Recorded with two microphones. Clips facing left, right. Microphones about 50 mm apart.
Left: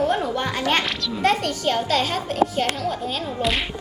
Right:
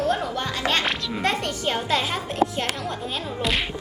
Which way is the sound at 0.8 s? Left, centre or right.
Centre.